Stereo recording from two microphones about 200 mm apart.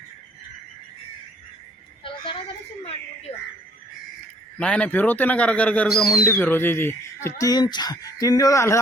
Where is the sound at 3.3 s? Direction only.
30° left (ahead or behind).